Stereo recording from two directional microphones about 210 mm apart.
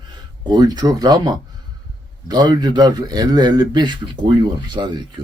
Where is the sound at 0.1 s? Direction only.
20° right (ahead or behind).